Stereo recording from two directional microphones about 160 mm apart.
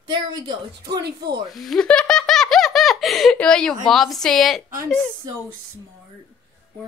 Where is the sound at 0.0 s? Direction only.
30° right (ahead or behind).